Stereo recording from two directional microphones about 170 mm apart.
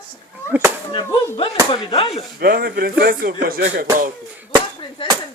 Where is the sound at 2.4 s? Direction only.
65° right (ahead or behind).